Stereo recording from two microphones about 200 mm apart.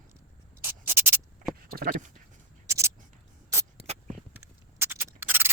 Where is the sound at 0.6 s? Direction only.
10° right (ahead or behind).